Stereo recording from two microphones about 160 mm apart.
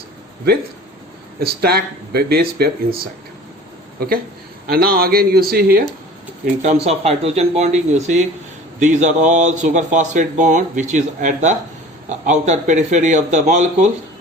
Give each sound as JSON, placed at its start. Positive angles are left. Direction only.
{"t": 1.4, "sound": "speech", "side_deg": -75}
{"t": 4.6, "sound": "speech", "side_deg": -70}
{"t": 6.8, "sound": "speech", "side_deg": -40}